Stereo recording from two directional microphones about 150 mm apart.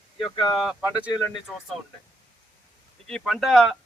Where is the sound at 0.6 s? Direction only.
5° right (ahead or behind).